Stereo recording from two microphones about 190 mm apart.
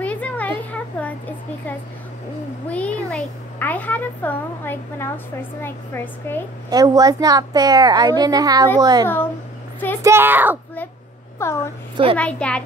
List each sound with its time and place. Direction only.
0.0 s a sound: 5° left (ahead or behind)
2.7 s a child's voice: 5° left (ahead or behind)
6.7 s a woman's voice: 20° right (ahead or behind)
9.0 s speech: 10° left (ahead or behind)
10.0 s speech: 10° right (ahead or behind)
11.4 s a child's voice: 15° left (ahead or behind)